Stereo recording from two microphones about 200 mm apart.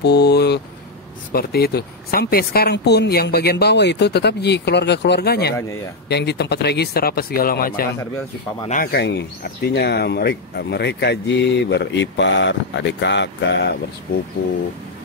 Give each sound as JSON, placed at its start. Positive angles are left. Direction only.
{"t": 0.0, "sound": "speech", "side_deg": 55}
{"t": 8.9, "sound": "speech", "side_deg": 55}